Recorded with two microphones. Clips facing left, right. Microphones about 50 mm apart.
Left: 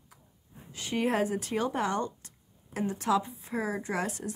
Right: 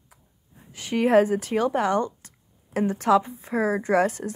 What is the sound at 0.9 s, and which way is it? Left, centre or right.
Speech, right.